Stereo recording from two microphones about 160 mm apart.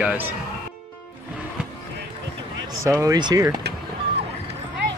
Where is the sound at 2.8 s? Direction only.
20° right (ahead or behind).